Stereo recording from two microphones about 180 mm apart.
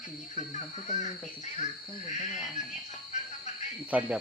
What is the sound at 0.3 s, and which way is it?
Speech, 40° left (ahead or behind).